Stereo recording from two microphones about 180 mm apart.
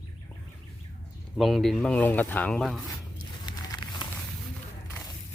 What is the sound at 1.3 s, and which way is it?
Speech, centre (ahead or behind).